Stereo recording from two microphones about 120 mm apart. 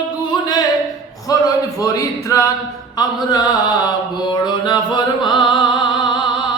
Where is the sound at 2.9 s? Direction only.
35° left (ahead or behind).